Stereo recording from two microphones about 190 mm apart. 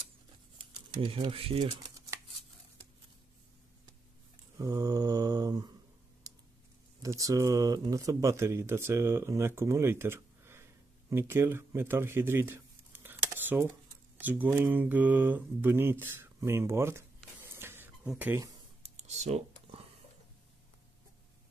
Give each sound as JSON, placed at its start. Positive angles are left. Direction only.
{"t": 0.6, "sound": "speech", "side_deg": -25}
{"t": 1.8, "sound": "a sound", "side_deg": -15}
{"t": 4.6, "sound": "mantra", "side_deg": -20}
{"t": 6.2, "sound": "typing", "side_deg": -20}
{"t": 7.0, "sound": "speech", "side_deg": -15}
{"t": 18.8, "sound": "a sound", "side_deg": -35}